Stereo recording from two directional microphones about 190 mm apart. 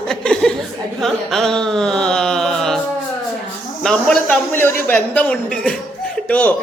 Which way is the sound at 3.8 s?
5° left (ahead or behind).